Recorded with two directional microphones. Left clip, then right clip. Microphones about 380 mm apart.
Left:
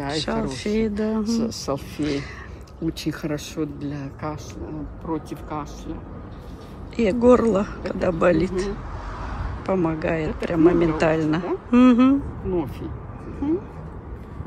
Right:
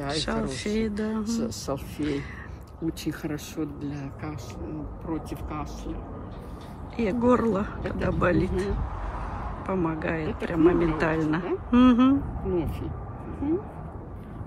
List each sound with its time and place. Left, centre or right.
0.1 s speech: centre
1.2 s speech: centre
7.0 s speech: centre